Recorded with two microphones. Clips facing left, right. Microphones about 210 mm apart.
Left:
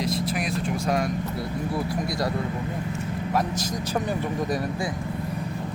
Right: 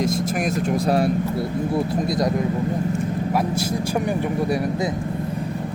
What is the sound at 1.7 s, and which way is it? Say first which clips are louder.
Speech: right 6 dB; 25° right (ahead or behind).